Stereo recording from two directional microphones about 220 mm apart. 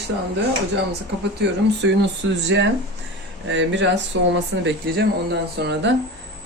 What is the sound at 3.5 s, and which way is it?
Speech, 55° right (ahead or behind).